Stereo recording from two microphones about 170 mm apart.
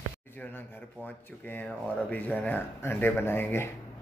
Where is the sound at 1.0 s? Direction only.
10° left (ahead or behind).